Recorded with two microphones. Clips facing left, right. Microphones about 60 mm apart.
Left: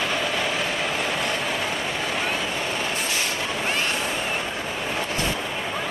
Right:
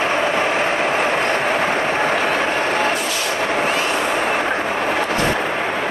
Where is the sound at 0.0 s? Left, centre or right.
Right.